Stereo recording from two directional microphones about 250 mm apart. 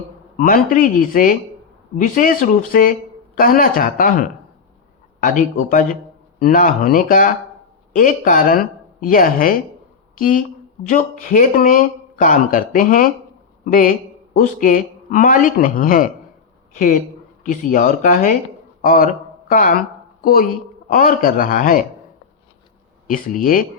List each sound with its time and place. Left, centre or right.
0.3 s speech: left
17.4 s speech: left
23.0 s speech: left